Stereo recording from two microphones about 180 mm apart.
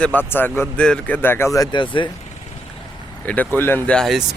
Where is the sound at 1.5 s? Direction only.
25° left (ahead or behind).